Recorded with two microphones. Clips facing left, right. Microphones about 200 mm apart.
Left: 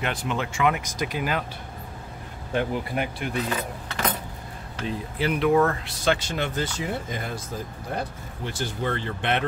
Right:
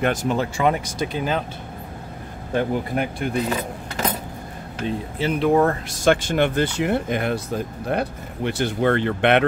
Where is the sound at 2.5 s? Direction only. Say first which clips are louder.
Right 4 dB; 45° right (ahead or behind).